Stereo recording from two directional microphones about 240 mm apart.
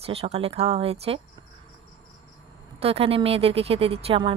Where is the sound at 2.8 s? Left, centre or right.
Right.